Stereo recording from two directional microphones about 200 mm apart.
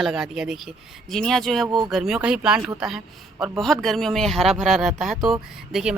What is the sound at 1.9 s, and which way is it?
Speech, centre (ahead or behind).